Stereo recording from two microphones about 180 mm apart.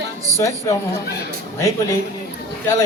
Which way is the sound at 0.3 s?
15° left (ahead or behind).